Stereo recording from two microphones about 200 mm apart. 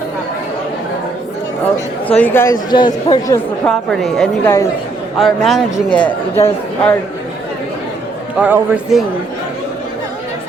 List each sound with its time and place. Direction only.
2.0 s speech: 10° left (ahead or behind)
3.7 s a woman's voice: centre (ahead or behind)
4.4 s speech: 15° left (ahead or behind)
5.2 s a woman's voice: centre (ahead or behind)
8.4 s a man's voice: 10° right (ahead or behind)